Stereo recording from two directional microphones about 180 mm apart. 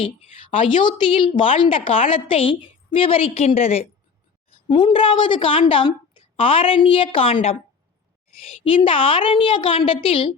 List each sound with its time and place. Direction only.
0.5 s a woman's voice: 25° left (ahead or behind)